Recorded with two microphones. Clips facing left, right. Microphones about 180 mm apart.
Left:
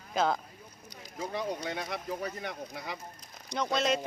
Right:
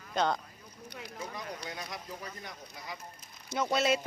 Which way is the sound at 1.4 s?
70° left (ahead or behind).